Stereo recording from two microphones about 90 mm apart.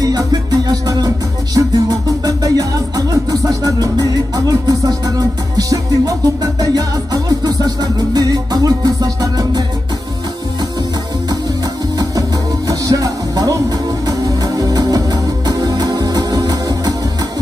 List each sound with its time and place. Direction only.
0.0 s music: 45° right (ahead or behind)
12.0 s music: 40° right (ahead or behind)